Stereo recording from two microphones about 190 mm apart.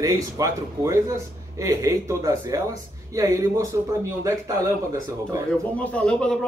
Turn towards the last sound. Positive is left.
turn(degrees=5)  # may be behind; listen again after turning